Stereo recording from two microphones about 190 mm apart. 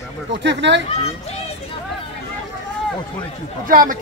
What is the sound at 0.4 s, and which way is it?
Speech, 70° right (ahead or behind).